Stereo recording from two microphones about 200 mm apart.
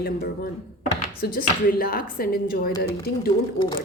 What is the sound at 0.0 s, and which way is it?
A woman's voice, 50° left (ahead or behind).